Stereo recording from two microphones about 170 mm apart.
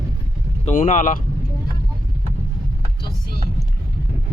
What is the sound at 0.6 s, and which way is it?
Speech, 50° left (ahead or behind).